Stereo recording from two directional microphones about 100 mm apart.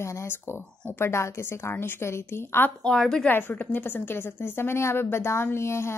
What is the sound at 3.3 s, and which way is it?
A woman's voice, 20° left (ahead or behind).